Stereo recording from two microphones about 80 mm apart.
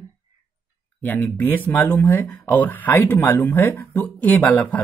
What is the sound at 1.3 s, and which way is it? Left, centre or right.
Speech, left.